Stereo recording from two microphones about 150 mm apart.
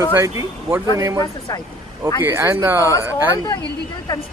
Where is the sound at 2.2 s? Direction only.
15° right (ahead or behind).